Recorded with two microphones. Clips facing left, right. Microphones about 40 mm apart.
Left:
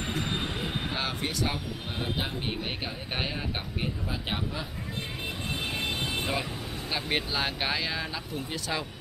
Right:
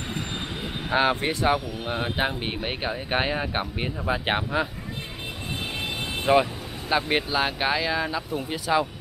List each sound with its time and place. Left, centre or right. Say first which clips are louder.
0.9 s speech: right 13 dB; right
4.1 s speech: right 8 dB; right
5.8 s vehicle: even; centre
6.9 s speech: right 7 dB; centre